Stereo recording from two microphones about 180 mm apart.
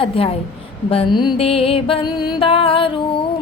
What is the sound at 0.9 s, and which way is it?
Music, 30° left (ahead or behind).